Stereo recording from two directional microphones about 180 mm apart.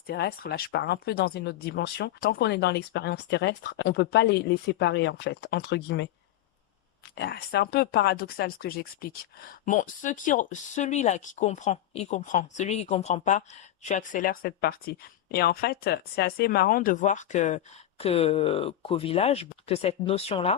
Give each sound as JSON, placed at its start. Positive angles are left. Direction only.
{"t": 0.1, "sound": "speech", "side_deg": 60}
{"t": 7.2, "sound": "speech", "side_deg": 60}